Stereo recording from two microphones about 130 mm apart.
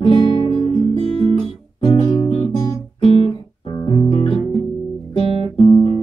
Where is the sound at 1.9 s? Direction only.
35° left (ahead or behind).